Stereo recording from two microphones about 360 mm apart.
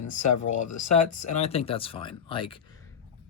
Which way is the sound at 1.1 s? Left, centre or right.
Centre.